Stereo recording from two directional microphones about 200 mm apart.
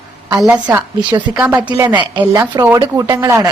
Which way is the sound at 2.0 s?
20° right (ahead or behind).